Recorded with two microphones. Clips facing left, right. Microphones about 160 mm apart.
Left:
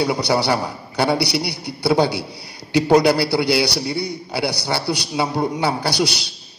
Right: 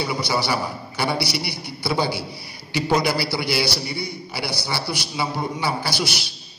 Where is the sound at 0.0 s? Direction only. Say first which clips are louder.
Left 5 dB; 65° left (ahead or behind).